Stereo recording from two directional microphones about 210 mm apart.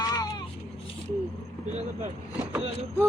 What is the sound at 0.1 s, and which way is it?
Vehicle, 20° left (ahead or behind).